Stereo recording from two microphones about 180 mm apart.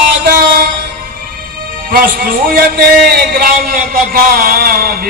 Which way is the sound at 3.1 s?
55° right (ahead or behind).